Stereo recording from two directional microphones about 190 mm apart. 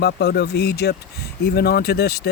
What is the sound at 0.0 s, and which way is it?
Speech, 60° left (ahead or behind).